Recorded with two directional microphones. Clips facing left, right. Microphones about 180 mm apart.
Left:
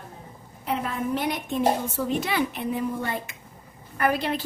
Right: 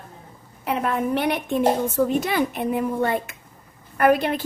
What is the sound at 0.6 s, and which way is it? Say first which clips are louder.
A woman's voice: right 4 dB; 65° right (ahead or behind).